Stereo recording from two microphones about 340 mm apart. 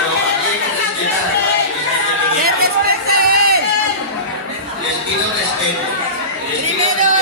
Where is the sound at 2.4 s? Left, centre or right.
Right.